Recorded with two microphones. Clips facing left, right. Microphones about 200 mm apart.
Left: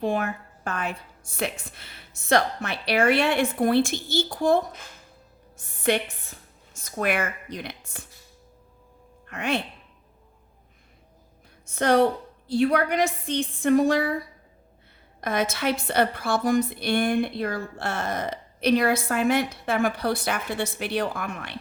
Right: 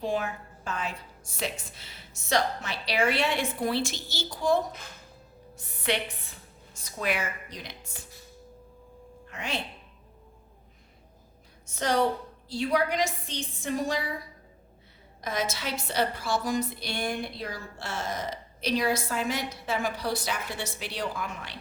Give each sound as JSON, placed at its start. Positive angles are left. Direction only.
{"t": 0.0, "sound": "a woman's voice", "side_deg": 60}
{"t": 9.2, "sound": "speech", "side_deg": 60}
{"t": 11.7, "sound": "a woman's voice", "side_deg": 60}
{"t": 15.2, "sound": "a woman's voice", "side_deg": 60}